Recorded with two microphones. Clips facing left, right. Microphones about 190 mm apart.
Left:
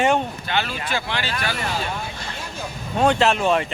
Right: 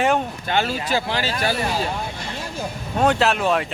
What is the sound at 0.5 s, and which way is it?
Speech, 40° right (ahead or behind).